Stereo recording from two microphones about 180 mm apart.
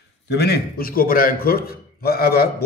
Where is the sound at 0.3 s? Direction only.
65° left (ahead or behind).